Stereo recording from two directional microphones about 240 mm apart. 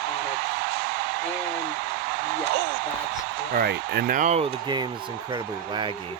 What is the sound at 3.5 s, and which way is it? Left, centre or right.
Speech, right.